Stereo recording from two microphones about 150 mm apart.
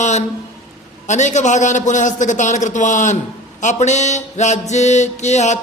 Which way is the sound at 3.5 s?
50° left (ahead or behind).